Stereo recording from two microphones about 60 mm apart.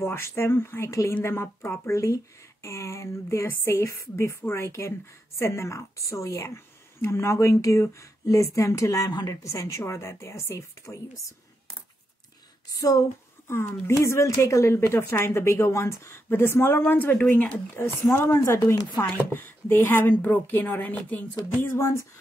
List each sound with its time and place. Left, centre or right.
0.0 s speech: left
0.8 s a woman's voice: left
1.2 s a woman's voice: left
12.7 s speech: left
13.5 s speech: left
17.2 s speech: left
18.1 s speech: left